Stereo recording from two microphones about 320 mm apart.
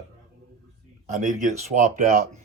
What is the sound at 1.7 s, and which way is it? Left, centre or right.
Speech, right.